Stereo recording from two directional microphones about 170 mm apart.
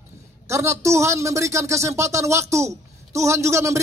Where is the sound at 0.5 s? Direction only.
15° right (ahead or behind).